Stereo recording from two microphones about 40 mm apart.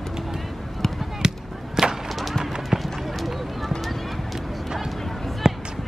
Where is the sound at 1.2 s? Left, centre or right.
Centre.